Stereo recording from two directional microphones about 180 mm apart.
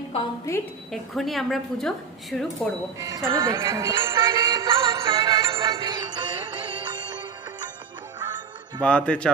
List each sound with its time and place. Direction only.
1.1 s speech: centre (ahead or behind)
3.0 s music: 15° right (ahead or behind)
8.8 s speech: 5° left (ahead or behind)